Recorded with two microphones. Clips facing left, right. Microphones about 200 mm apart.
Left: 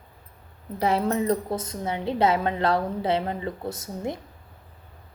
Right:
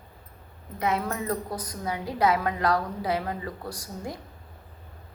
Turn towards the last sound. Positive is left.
turn(degrees=25)  # may be behind; listen again after turning